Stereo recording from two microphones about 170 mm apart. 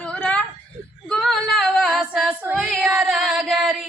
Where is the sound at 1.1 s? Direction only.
5° left (ahead or behind).